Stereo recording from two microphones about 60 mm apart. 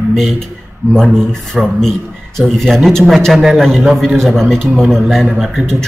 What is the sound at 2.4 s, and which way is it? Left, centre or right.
Speech, centre.